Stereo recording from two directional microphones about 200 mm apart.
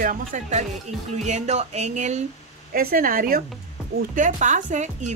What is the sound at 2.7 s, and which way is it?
Speech, 50° right (ahead or behind).